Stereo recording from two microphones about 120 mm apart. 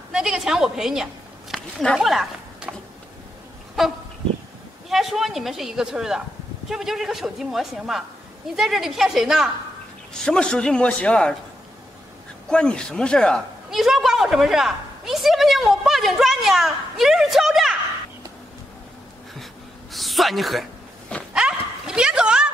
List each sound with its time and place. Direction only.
0.1 s a woman's voice: 5° right (ahead or behind)
2.0 s a sound: 5° right (ahead or behind)
3.8 s goose: centre (ahead or behind)
4.8 s a woman's voice: centre (ahead or behind)
12.4 s a man's voice: 5° left (ahead or behind)
13.7 s a woman's voice: centre (ahead or behind)
19.9 s a woman's voice: centre (ahead or behind)
21.3 s dog: 5° right (ahead or behind)